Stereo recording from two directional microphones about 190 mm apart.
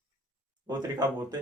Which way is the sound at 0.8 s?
20° right (ahead or behind).